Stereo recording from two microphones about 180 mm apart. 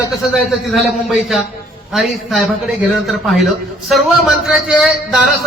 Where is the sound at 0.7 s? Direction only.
Centre (ahead or behind).